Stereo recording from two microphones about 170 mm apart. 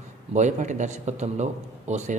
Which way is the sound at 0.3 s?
45° right (ahead or behind).